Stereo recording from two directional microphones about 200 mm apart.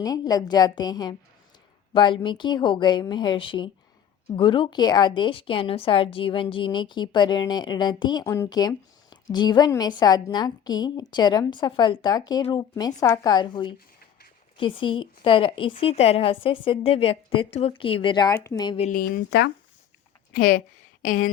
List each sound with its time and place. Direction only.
0.0 s a woman's voice: 20° left (ahead or behind)
18.9 s speech: 45° left (ahead or behind)